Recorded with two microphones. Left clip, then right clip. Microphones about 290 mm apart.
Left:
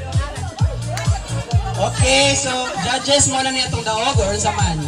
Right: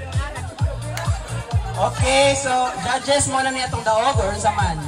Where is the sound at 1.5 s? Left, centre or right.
Centre.